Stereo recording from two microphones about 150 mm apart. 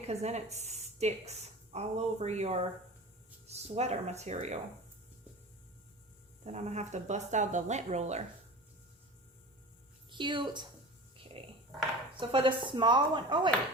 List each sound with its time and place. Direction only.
0.0 s a woman's voice: 45° right (ahead or behind)
6.4 s speech: 50° right (ahead or behind)
10.1 s a woman's voice: 30° right (ahead or behind)
11.4 s a sound: 35° right (ahead or behind)
12.1 s speech: 35° right (ahead or behind)